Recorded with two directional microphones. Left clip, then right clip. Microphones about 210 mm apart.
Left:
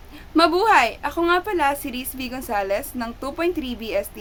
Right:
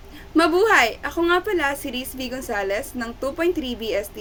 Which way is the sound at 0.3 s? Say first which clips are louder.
Left 1 dB; 10° left (ahead or behind).